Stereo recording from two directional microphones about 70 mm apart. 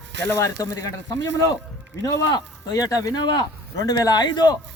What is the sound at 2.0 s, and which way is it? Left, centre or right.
Speech, left.